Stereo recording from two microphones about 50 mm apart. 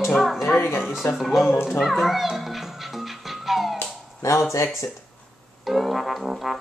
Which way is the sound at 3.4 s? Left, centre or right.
Centre.